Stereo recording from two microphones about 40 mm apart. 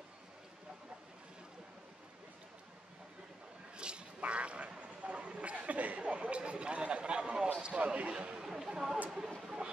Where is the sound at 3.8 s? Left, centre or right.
Right.